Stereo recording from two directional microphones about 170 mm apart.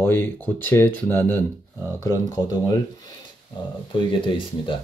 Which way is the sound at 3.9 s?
30° left (ahead or behind).